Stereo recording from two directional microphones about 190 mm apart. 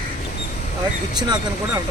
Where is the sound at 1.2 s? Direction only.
20° right (ahead or behind).